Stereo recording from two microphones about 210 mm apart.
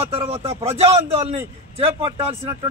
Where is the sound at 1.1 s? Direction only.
30° right (ahead or behind).